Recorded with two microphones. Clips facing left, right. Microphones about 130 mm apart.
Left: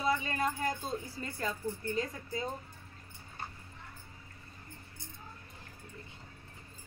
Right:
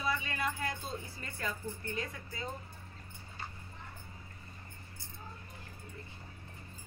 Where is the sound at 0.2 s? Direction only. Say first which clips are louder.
Left 3 dB; 40° left (ahead or behind).